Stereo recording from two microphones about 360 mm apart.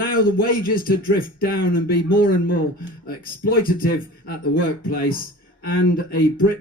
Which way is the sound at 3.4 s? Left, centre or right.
Left.